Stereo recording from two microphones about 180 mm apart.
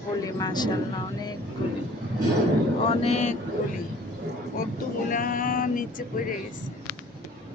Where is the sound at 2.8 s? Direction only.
35° left (ahead or behind).